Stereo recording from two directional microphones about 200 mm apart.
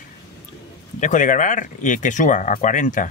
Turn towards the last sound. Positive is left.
turn(degrees=40)  # may be behind; listen again after turning